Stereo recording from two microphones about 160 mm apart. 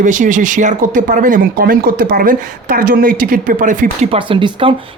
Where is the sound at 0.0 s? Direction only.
50° right (ahead or behind).